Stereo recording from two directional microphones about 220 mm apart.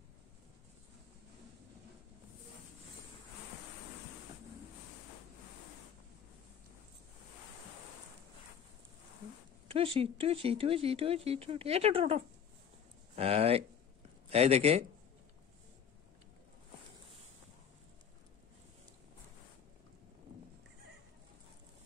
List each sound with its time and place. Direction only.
9.7 s speech: 25° right (ahead or behind)